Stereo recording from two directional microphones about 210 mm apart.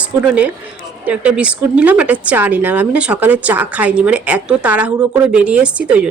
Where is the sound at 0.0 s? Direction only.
5° right (ahead or behind).